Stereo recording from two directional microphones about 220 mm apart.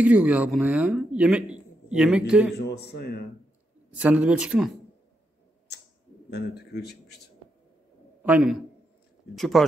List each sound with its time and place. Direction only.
0.0 s speech: 5° right (ahead or behind)
2.5 s speech: 45° left (ahead or behind)
4.0 s speech: 5° right (ahead or behind)
6.3 s speech: 50° left (ahead or behind)
8.2 s a man's voice: 5° right (ahead or behind)